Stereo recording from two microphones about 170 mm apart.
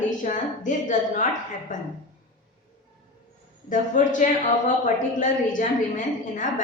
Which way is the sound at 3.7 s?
50° left (ahead or behind).